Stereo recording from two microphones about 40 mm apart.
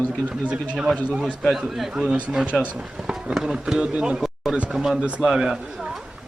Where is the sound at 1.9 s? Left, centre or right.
Centre.